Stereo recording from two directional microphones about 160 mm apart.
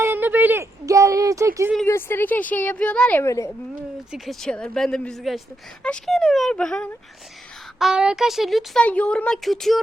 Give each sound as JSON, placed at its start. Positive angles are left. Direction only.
{"t": 0.0, "sound": "speech", "side_deg": -10}
{"t": 1.9, "sound": "a woman's voice", "side_deg": 15}
{"t": 4.1, "sound": "speech", "side_deg": 0}